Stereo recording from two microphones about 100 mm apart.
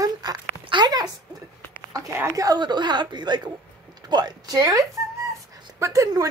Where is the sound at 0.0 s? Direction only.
40° right (ahead or behind).